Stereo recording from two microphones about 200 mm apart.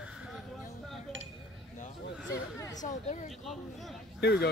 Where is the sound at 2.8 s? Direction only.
35° left (ahead or behind).